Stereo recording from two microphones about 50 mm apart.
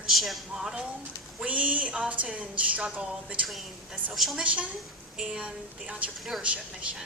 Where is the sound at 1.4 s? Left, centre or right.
Right.